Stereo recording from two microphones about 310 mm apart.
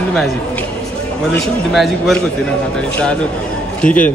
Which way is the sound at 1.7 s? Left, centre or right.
Centre.